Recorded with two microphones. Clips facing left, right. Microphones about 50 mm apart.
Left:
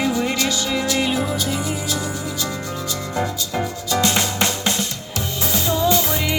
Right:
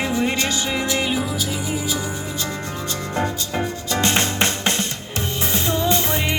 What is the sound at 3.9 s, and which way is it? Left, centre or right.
Music, right.